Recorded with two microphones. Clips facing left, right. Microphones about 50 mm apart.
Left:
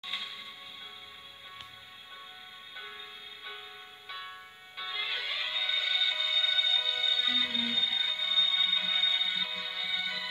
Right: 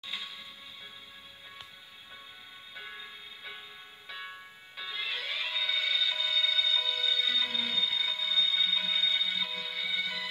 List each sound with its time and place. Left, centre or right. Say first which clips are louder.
0.0 s music: left 1 dB; centre
4.7 s music: left 1 dB; centre